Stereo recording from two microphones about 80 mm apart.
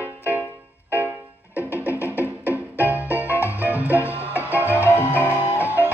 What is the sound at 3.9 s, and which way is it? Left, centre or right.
Music, left.